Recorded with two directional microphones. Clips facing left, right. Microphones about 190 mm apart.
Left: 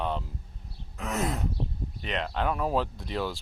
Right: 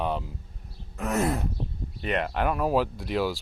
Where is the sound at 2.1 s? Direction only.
10° right (ahead or behind).